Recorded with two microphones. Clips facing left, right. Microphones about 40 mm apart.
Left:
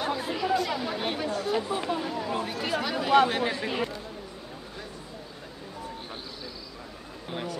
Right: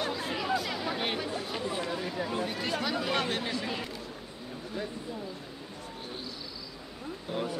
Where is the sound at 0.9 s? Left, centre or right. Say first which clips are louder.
Left 2 dB; centre.